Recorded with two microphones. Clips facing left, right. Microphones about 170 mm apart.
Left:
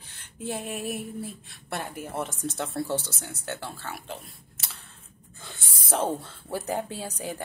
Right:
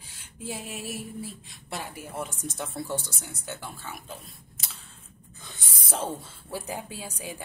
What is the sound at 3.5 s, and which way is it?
Speech, 75° left (ahead or behind).